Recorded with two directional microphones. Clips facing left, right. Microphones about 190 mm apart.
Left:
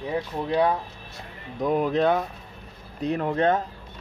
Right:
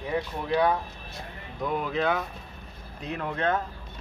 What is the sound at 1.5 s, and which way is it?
Speech, 40° left (ahead or behind).